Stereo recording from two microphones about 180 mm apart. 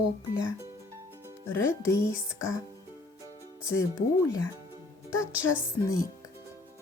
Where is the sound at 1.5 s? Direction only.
15° left (ahead or behind).